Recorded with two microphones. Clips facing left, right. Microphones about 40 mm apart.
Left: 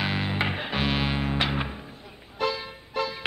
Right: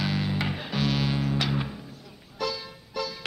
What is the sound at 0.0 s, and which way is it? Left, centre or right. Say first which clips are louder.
Music: left 1 dB; left.